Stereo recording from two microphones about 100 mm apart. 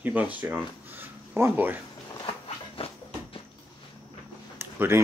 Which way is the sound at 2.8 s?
65° left (ahead or behind).